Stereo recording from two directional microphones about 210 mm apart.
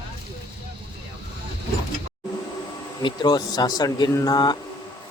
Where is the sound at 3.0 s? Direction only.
20° left (ahead or behind).